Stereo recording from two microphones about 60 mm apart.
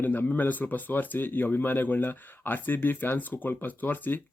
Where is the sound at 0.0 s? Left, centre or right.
Left.